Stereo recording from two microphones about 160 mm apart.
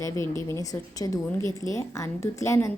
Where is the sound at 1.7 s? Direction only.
20° left (ahead or behind).